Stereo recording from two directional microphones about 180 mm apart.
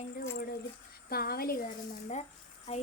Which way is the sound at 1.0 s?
55° left (ahead or behind).